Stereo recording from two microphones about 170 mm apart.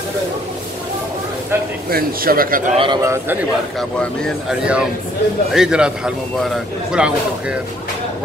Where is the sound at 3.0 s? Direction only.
15° right (ahead or behind).